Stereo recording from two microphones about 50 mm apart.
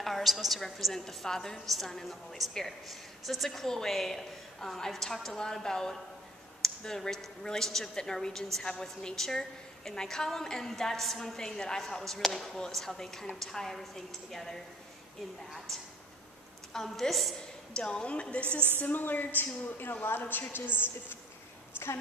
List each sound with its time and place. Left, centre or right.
0.0 s a woman's voice: centre
15.7 s a woman's voice: centre
17.7 s a woman's voice: centre
18.8 s a woman's voice: left